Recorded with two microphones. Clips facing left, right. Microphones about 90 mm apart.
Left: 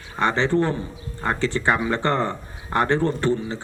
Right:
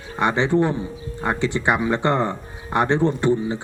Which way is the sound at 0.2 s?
15° right (ahead or behind).